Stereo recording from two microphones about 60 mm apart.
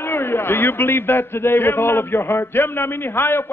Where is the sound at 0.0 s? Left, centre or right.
Left.